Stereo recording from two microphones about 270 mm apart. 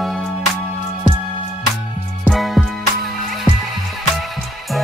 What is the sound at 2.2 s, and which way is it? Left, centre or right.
Music, centre.